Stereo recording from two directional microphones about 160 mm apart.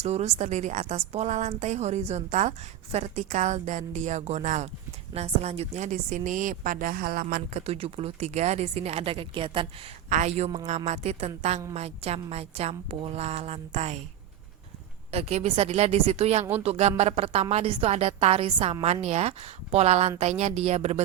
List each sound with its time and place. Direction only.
0.0 s a woman's voice: 45° right (ahead or behind); by 7.6 s 60° right (ahead or behind)
7.6 s speech: 40° right (ahead or behind)
10.1 s a woman's voice: 45° right (ahead or behind)
15.1 s a woman's voice: 40° right (ahead or behind)